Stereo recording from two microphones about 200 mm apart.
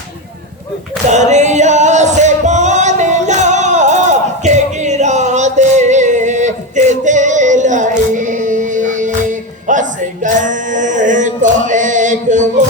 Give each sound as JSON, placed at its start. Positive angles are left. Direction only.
{"t": 1.1, "sound": "music", "side_deg": -35}
{"t": 10.2, "sound": "male singing", "side_deg": -40}